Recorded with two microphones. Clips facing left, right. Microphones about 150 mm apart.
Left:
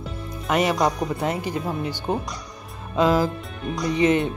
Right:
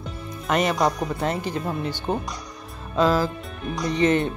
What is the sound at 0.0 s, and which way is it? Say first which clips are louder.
Speech: left 1 dB; 10° left (ahead or behind).